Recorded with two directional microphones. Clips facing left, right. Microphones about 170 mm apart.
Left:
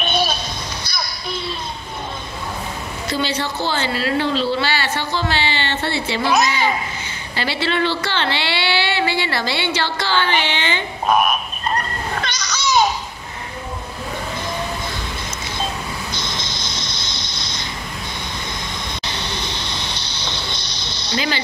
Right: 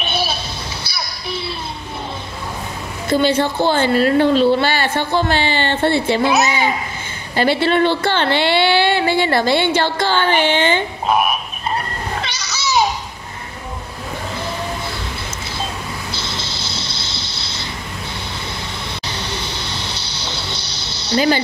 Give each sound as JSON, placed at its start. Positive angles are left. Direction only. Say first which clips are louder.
{"t": 0.0, "sound": "a sound", "louder": "left 1 dB", "side_deg": -10}
{"t": 3.1, "sound": "speech", "louder": "right 8 dB", "side_deg": -50}
{"t": 7.3, "sound": "speech", "louder": "right 6 dB", "side_deg": -50}
{"t": 11.1, "sound": "a sound", "louder": "left 1 dB", "side_deg": -10}
{"t": 16.1, "sound": "vehicle", "louder": "right 1 dB", "side_deg": -10}
{"t": 19.1, "sound": "vehicle", "louder": "right 1 dB", "side_deg": -10}